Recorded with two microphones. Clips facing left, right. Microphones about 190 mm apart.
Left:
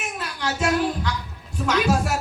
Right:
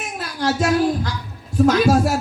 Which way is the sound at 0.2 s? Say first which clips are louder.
Right 6 dB; 40° right (ahead or behind).